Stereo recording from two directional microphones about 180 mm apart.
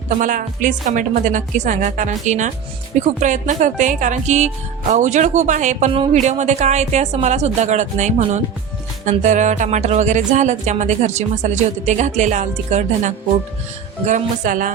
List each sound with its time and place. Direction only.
0.2 s a woman's voice: 45° right (ahead or behind)
3.2 s music: 45° right (ahead or behind)
14.0 s a woman's voice: 45° right (ahead or behind)